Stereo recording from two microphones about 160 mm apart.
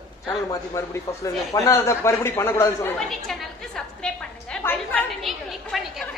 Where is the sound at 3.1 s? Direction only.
5° left (ahead or behind).